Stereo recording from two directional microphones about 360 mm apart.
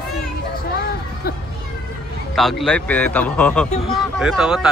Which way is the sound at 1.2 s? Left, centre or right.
Left.